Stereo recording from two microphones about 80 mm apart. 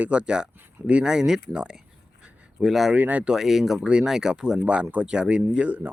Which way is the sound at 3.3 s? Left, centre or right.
Centre.